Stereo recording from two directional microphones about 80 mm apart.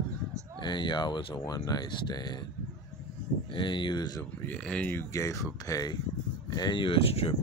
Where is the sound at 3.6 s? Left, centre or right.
Left.